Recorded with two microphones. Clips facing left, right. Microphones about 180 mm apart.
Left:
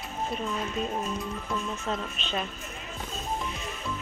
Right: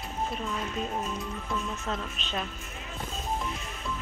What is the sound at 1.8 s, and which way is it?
Speech, centre (ahead or behind).